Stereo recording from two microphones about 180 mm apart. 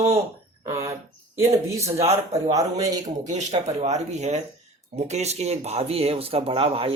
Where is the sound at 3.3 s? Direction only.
40° right (ahead or behind).